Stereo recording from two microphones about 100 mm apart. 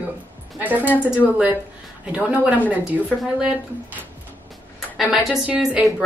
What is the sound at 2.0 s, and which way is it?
A woman's voice, 15° right (ahead or behind).